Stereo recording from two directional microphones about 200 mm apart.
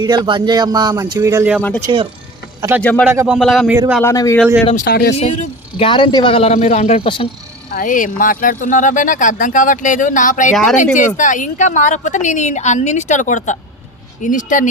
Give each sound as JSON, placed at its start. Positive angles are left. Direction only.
{"t": 0.0, "sound": "speech", "side_deg": -20}
{"t": 1.9, "sound": "speech", "side_deg": -25}
{"t": 2.6, "sound": "speech", "side_deg": -10}
{"t": 2.8, "sound": "a man's voice", "side_deg": 5}
{"t": 3.1, "sound": "speech", "side_deg": -10}
{"t": 4.0, "sound": "a man's voice", "side_deg": 15}
{"t": 4.6, "sound": "speech", "side_deg": 35}
{"t": 4.9, "sound": "speech", "side_deg": 55}
{"t": 5.1, "sound": "speech", "side_deg": 30}
{"t": 7.7, "sound": "speech", "side_deg": 45}
{"t": 10.5, "sound": "speech", "side_deg": 0}
{"t": 10.9, "sound": "speech", "side_deg": 40}